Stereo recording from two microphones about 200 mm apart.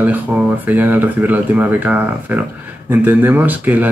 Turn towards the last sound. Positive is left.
turn(degrees=-10)  # may be behind; listen again after turning